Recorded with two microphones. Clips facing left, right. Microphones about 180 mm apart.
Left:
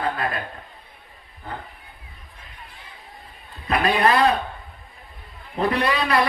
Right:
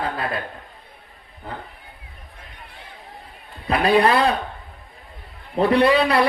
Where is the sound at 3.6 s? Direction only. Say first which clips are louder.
Right 3 dB; 30° right (ahead or behind).